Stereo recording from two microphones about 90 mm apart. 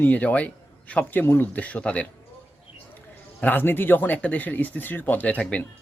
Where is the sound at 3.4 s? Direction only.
20° left (ahead or behind).